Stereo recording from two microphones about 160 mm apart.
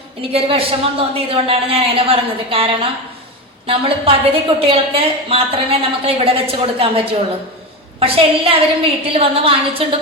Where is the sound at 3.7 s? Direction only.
35° right (ahead or behind).